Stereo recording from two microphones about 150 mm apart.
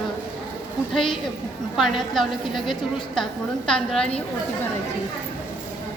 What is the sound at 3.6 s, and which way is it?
Speech, 5° left (ahead or behind).